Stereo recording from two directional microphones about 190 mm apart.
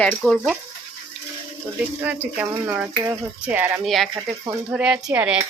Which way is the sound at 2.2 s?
10° right (ahead or behind).